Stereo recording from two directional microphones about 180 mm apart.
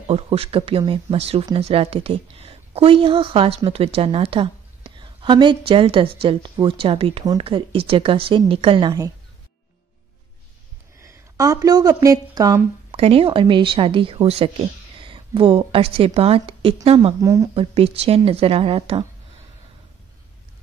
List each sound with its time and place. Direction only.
0.1 s a woman's voice: 35° right (ahead or behind)
11.0 s speech: 15° right (ahead or behind)
12.9 s a woman's voice: 30° right (ahead or behind)
17.2 s speech: 20° right (ahead or behind)
17.6 s a woman's voice: 35° right (ahead or behind)